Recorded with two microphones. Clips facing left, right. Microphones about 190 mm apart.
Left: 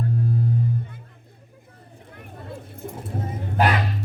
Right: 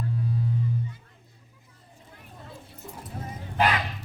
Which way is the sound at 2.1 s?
60° left (ahead or behind).